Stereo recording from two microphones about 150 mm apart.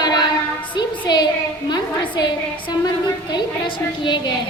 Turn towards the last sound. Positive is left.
turn(degrees=30)  # may be behind; listen again after turning